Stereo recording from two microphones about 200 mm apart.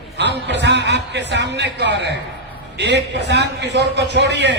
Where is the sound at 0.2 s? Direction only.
60° right (ahead or behind).